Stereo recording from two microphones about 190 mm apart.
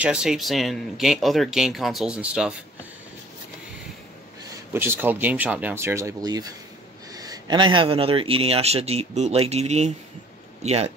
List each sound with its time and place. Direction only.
0.0 s speech: 5° right (ahead or behind)
4.7 s a man's voice: 10° right (ahead or behind); by 10.9 s 35° right (ahead or behind)